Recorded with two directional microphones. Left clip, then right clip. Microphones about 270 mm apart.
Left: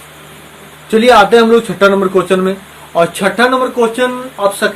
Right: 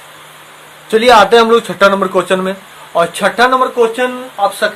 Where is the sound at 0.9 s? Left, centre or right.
Right.